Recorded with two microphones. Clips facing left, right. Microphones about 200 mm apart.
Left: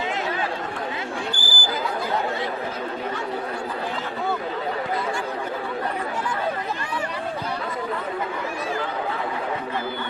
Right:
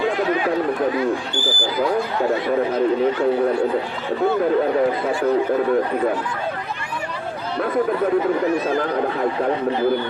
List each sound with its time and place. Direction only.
1.3 s basketball bounce: 35° left (ahead or behind)